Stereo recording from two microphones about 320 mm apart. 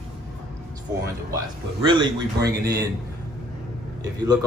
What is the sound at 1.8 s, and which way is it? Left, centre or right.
A man's voice, centre.